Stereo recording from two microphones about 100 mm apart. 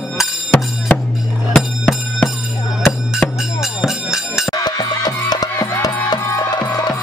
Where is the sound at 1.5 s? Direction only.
15° left (ahead or behind).